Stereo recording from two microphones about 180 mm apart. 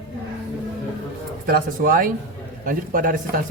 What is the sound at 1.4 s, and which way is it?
Speech, 55° right (ahead or behind).